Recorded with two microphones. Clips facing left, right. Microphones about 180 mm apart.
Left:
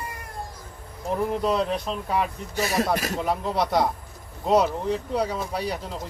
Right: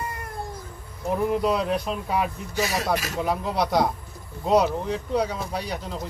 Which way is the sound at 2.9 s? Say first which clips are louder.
Left 1 dB; 50° left (ahead or behind).